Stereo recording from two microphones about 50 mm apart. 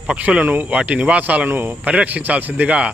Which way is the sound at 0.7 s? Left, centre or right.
Right.